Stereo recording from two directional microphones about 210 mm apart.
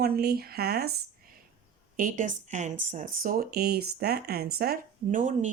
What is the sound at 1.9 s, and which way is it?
Speech, 40° right (ahead or behind).